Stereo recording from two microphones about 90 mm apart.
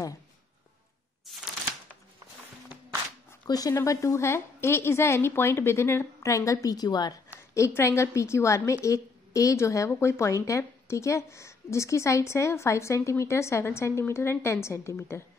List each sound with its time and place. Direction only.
1.2 s a sound: centre (ahead or behind)
3.4 s a woman's voice: 45° left (ahead or behind)
7.5 s a woman's voice: 35° left (ahead or behind)